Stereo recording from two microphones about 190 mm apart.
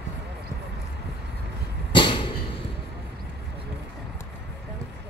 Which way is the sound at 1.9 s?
25° left (ahead or behind).